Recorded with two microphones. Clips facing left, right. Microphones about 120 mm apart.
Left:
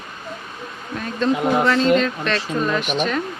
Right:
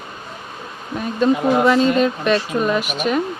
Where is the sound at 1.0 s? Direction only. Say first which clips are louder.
Right 3 dB; 10° right (ahead or behind).